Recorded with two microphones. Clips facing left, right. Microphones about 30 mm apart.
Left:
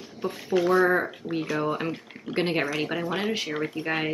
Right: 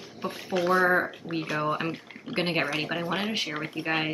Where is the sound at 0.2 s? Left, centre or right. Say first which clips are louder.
Left 3 dB; centre.